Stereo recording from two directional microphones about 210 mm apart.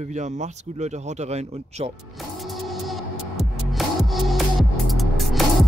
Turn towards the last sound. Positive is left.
turn(degrees=0)  # may be behind; listen again after turning